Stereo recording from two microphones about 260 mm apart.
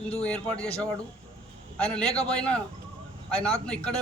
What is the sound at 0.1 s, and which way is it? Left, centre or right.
Speech, centre.